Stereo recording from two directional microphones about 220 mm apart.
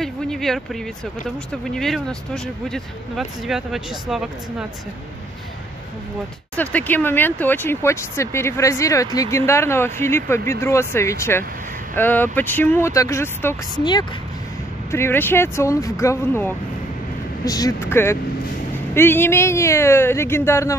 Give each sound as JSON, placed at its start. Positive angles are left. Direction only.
{"t": 0.0, "sound": "a sound", "side_deg": 0}
{"t": 1.5, "sound": "speech", "side_deg": 0}
{"t": 6.5, "sound": "speech", "side_deg": 5}